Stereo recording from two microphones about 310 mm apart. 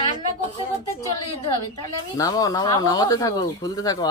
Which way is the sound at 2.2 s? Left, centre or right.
Centre.